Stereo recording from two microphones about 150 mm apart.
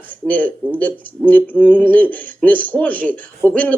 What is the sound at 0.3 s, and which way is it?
Speech, 10° left (ahead or behind).